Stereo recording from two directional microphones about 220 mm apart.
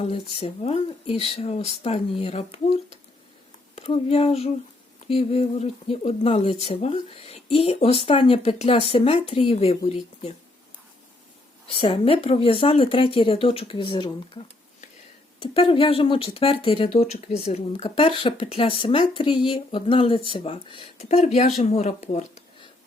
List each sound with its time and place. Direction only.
0.0 s speech: 25° left (ahead or behind)
3.8 s speech: 25° left (ahead or behind)
11.7 s speech: 25° left (ahead or behind)
15.4 s speech: 25° left (ahead or behind)